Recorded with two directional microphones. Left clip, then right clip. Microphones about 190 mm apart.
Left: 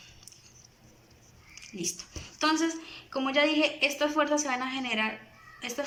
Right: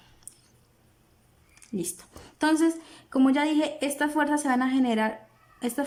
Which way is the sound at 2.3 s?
65° right (ahead or behind).